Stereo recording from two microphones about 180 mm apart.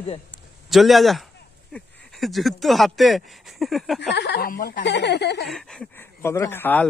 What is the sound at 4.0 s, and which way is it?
Speech, 70° left (ahead or behind).